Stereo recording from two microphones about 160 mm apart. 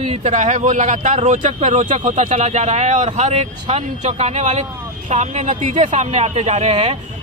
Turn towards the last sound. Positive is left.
turn(degrees=-40)  # may be behind; listen again after turning